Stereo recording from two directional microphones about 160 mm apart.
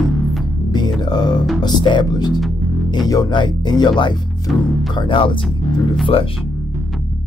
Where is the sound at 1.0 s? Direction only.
25° left (ahead or behind).